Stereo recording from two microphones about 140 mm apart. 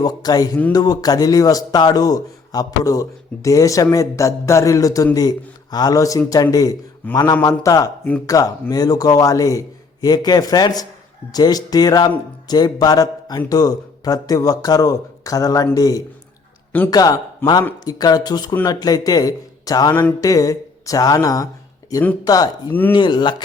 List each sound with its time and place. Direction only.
0.0 s a man's voice: 25° left (ahead or behind)
7.0 s speech: 10° left (ahead or behind)
7.4 s a man's voice: 25° left (ahead or behind)